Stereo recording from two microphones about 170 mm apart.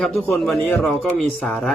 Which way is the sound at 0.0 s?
5° left (ahead or behind).